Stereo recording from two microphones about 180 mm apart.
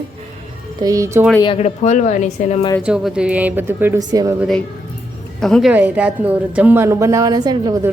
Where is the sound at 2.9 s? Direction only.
5° right (ahead or behind); by 4.3 s 20° right (ahead or behind).